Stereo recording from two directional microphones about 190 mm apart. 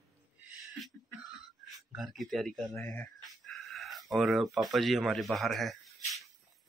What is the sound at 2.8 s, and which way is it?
Speech, 15° left (ahead or behind).